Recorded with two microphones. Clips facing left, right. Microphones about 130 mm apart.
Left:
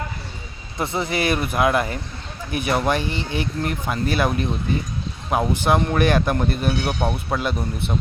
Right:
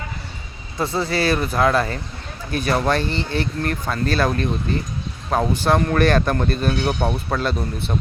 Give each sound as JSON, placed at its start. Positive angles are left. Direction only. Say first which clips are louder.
{"t": 0.8, "sound": "speech", "louder": "right 2 dB", "side_deg": 20}